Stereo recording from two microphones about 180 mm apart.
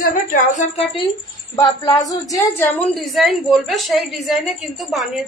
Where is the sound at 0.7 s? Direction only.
30° left (ahead or behind).